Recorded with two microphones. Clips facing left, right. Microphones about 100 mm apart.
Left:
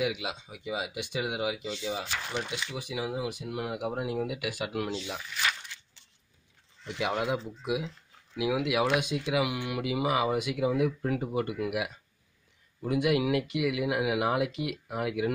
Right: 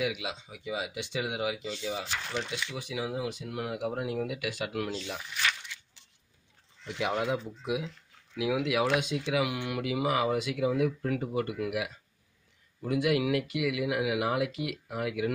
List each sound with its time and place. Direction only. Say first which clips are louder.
0.0 s speech: left 1 dB; 20° left (ahead or behind)
2.0 s speech: even; 10° left (ahead or behind)
6.9 s speech: even; 5° left (ahead or behind); by 15.3 s 25° left (ahead or behind)